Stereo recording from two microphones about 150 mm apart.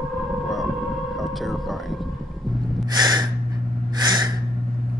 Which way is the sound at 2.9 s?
30° right (ahead or behind).